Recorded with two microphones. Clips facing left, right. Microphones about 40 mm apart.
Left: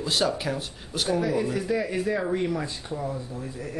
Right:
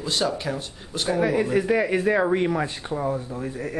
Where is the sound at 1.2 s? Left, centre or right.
Right.